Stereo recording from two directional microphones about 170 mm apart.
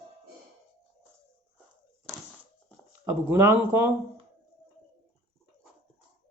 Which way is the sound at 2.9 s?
15° right (ahead or behind).